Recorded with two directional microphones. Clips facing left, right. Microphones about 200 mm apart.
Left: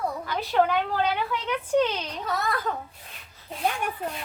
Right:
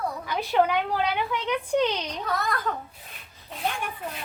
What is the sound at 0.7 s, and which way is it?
A woman's voice, 10° right (ahead or behind).